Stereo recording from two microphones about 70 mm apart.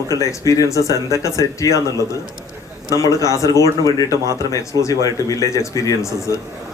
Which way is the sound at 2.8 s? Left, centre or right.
Left.